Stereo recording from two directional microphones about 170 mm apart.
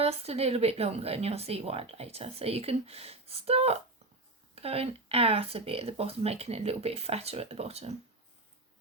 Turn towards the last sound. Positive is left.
turn(degrees=-40)  # may be behind; listen again after turning